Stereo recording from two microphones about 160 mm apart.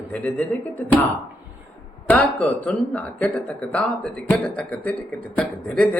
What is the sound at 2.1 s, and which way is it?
Speech, 10° left (ahead or behind).